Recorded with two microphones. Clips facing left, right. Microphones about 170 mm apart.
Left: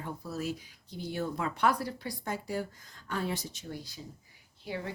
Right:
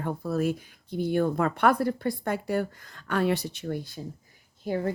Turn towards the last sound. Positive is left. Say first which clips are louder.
# right 9 dB
turn(degrees=-45)  # may be behind; listen again after turning